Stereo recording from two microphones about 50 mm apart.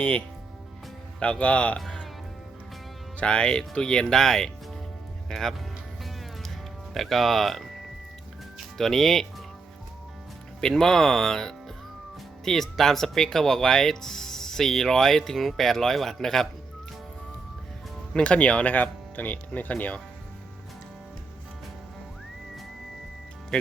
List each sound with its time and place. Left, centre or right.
0.0 s speech: left
3.2 s speech: left
6.9 s speech: centre
10.6 s speech: centre
18.1 s speech: left